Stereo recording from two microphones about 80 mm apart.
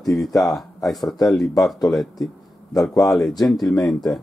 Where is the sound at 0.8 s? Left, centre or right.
Centre.